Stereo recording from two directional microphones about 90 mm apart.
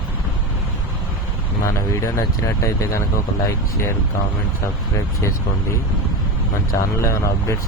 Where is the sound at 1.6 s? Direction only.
35° left (ahead or behind).